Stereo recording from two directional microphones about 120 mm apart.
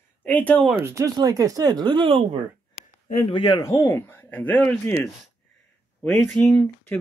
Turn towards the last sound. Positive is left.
turn(degrees=10)  # may be behind; listen again after turning